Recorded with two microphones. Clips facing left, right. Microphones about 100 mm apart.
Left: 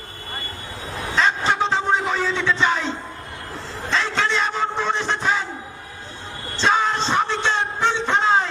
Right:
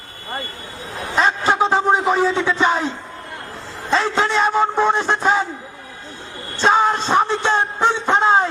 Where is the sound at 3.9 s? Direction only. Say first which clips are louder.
Right 4 dB; 45° right (ahead or behind).